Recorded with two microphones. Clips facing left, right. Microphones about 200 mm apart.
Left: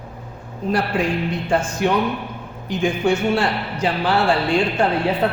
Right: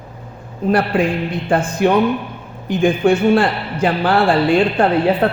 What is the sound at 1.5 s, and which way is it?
Speech, 55° right (ahead or behind).